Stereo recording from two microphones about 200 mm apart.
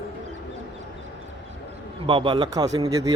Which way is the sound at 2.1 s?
25° right (ahead or behind).